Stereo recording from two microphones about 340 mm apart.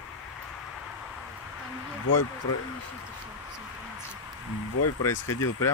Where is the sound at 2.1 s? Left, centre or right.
Left.